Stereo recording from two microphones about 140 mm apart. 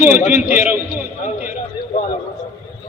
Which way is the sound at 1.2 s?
65° left (ahead or behind).